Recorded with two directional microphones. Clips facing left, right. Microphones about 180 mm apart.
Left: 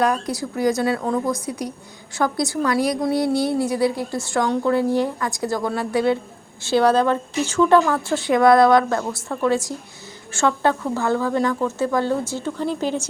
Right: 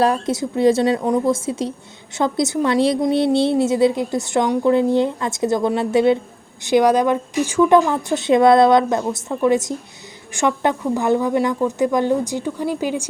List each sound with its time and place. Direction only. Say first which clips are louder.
0.0 s a woman's voice: right 3 dB; 25° right (ahead or behind)